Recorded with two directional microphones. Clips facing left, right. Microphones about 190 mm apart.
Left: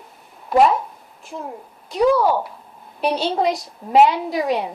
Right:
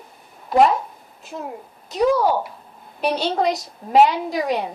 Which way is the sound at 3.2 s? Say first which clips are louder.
Even; 10° left (ahead or behind).